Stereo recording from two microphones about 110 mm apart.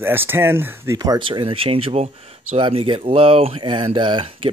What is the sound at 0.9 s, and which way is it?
Speech, 35° right (ahead or behind).